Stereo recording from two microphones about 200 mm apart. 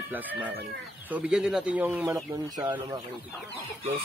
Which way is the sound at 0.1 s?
10° right (ahead or behind).